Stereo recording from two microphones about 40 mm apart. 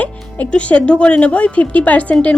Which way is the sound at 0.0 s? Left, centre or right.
Left.